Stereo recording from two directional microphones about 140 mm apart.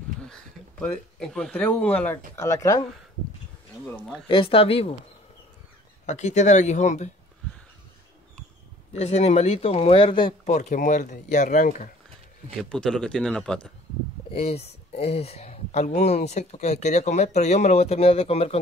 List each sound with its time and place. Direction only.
0.2 s a sound: 5° left (ahead or behind)
1.2 s speech: 5° left (ahead or behind); by 2.9 s 20° left (ahead or behind)
4.3 s a woman's voice: 40° left (ahead or behind)
6.0 s speech: 55° left (ahead or behind)
8.9 s speech: 50° left (ahead or behind)
10.4 s speech: 60° left (ahead or behind)
12.6 s speech: 5° left (ahead or behind)
14.3 s speech: 45° left (ahead or behind)